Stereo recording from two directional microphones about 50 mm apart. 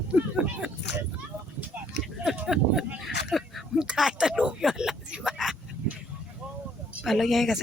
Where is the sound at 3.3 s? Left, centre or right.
Centre.